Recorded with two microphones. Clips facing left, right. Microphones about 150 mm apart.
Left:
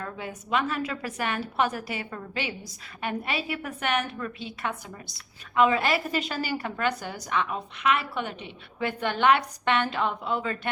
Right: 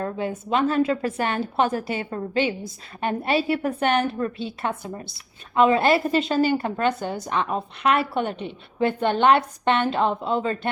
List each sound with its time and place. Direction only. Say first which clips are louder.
0.0 s a woman's voice: right 9 dB; 30° right (ahead or behind)